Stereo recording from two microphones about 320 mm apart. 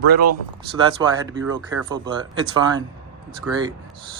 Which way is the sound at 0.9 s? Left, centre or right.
Centre.